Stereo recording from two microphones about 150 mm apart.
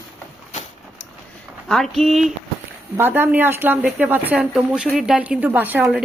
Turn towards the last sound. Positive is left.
turn(degrees=-10)  # may be behind; listen again after turning